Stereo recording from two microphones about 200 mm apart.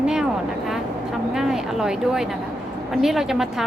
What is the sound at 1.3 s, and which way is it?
A woman's voice, centre (ahead or behind).